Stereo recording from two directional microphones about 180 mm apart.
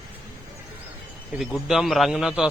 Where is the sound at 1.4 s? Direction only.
Centre (ahead or behind).